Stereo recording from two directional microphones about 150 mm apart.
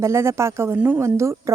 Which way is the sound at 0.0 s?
20° right (ahead or behind).